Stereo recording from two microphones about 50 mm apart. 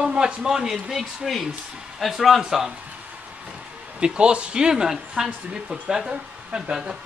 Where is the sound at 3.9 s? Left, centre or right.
Centre.